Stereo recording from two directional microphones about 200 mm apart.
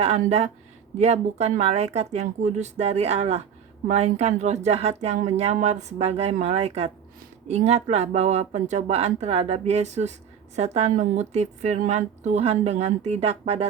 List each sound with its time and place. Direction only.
0.0 s speech: 35° right (ahead or behind)